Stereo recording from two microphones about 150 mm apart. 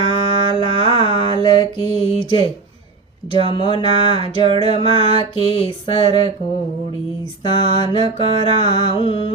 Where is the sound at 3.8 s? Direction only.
35° left (ahead or behind).